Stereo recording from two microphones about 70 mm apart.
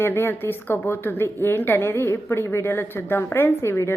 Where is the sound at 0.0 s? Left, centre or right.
Left.